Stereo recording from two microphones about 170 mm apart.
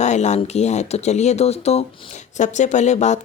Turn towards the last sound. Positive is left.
turn(degrees=45)  # may be behind; listen again after turning